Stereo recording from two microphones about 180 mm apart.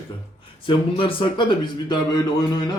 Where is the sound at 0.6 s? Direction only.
30° left (ahead or behind).